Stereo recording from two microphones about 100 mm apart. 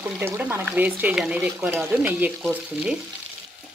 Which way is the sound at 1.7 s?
25° right (ahead or behind).